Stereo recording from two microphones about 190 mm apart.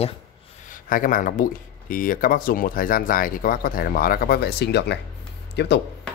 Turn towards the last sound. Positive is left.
turn(degrees=60)  # may be behind; listen again after turning